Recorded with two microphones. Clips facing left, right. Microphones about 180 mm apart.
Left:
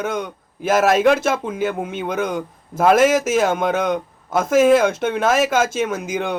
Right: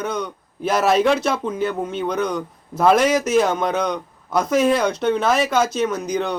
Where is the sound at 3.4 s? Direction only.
5° left (ahead or behind).